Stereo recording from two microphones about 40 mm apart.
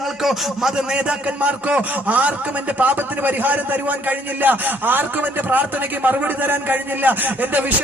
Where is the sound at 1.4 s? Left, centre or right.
Right.